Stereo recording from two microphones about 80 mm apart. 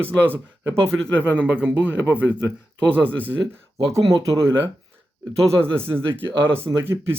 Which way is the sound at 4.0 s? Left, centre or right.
Right.